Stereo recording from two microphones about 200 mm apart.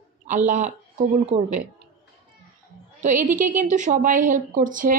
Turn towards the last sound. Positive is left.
turn(degrees=-40)  # may be behind; listen again after turning